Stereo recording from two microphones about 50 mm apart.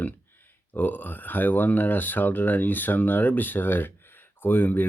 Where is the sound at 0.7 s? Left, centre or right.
Left.